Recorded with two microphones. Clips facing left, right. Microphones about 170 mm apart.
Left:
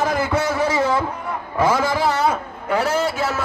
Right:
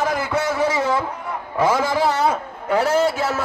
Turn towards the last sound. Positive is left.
turn(degrees=-45)  # may be behind; listen again after turning